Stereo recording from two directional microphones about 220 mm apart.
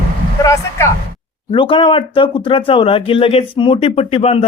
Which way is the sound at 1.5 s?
25° left (ahead or behind).